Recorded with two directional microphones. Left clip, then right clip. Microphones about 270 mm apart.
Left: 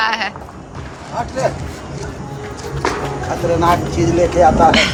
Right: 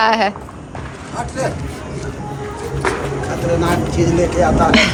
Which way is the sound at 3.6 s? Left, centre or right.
Left.